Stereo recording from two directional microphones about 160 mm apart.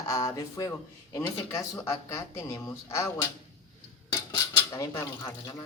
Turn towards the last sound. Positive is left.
turn(degrees=20)  # may be behind; listen again after turning